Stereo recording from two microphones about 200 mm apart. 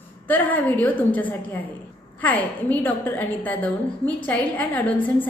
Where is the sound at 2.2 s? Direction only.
10° left (ahead or behind).